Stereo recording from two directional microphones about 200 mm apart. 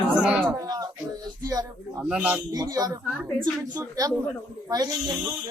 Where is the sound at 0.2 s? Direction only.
5° right (ahead or behind).